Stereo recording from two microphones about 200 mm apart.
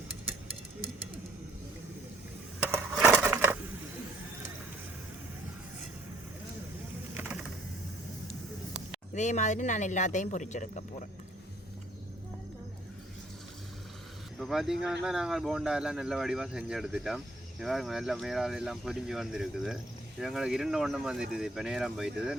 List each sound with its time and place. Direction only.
2.7 s a sound: 10° right (ahead or behind)
7.1 s typing: 10° right (ahead or behind)
9.1 s speech: 35° left (ahead or behind)
14.3 s speech: centre (ahead or behind)